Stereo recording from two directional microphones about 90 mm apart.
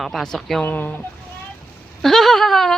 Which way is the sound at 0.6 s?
20° left (ahead or behind).